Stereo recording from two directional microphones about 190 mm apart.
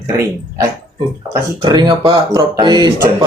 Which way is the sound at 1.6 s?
20° right (ahead or behind).